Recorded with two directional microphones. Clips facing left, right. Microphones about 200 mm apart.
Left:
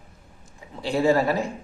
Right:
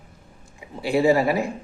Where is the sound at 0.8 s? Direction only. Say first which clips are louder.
Right 2 dB; 10° right (ahead or behind).